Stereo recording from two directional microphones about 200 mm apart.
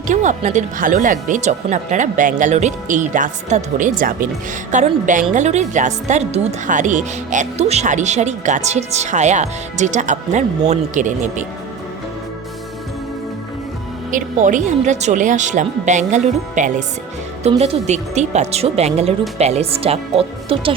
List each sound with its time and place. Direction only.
0.1 s a woman's voice: 35° right (ahead or behind)
14.1 s a woman's voice: 40° right (ahead or behind)